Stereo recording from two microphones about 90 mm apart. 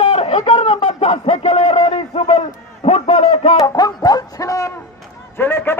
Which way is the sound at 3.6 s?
45° left (ahead or behind).